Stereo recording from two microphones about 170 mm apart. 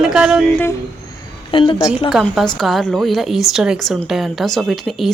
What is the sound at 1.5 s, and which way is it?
Speech, 30° left (ahead or behind).